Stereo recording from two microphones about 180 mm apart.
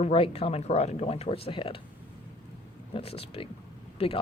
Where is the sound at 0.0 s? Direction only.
35° left (ahead or behind).